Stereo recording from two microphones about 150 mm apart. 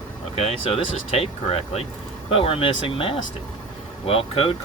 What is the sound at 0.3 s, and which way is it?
Speech, 40° left (ahead or behind).